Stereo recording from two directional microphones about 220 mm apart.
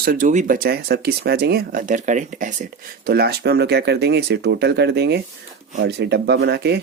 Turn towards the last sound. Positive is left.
turn(degrees=-50)  # may be behind; listen again after turning